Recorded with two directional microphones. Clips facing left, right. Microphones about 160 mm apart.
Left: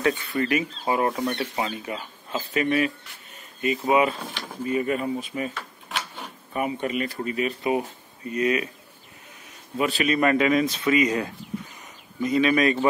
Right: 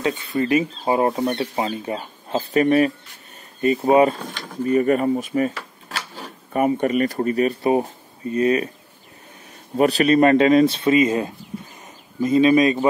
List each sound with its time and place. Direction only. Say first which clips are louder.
0.0 s speech: right 2 dB; 20° right (ahead or behind); by 5.5 s 45° right (ahead or behind)
6.5 s speech: right 8 dB; 45° right (ahead or behind)
9.8 s speech: right 7 dB; 40° right (ahead or behind); by 12.8 s 20° right (ahead or behind)